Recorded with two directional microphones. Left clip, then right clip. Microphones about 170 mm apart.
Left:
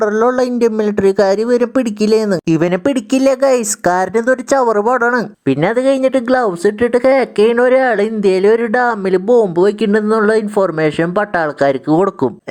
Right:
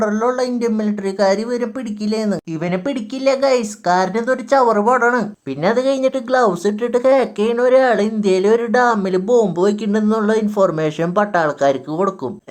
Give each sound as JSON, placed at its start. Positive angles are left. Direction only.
{"t": 0.0, "sound": "speech", "side_deg": 45}